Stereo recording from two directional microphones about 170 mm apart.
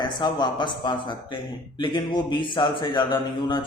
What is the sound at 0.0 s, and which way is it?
A man's voice, 25° left (ahead or behind).